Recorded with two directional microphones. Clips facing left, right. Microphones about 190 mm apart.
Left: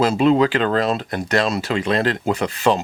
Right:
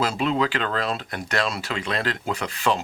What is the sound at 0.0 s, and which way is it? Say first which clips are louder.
Speech: left 8 dB; 25° left (ahead or behind).